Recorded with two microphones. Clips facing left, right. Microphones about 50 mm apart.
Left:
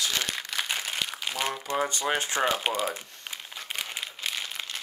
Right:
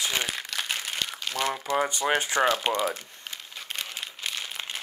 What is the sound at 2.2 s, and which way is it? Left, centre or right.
Speech, right.